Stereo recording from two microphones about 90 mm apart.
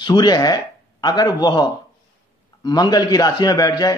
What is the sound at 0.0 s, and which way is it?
A man's voice, 55° left (ahead or behind).